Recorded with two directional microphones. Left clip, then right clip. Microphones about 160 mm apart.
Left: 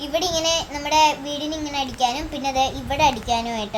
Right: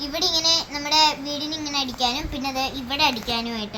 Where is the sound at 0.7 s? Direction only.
30° left (ahead or behind).